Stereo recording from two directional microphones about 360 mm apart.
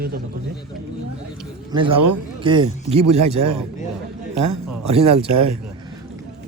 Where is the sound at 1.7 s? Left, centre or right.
Centre.